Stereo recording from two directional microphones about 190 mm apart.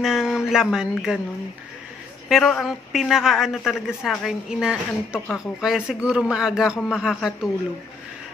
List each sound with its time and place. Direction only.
0.0 s speech: centre (ahead or behind)
2.2 s speech: centre (ahead or behind)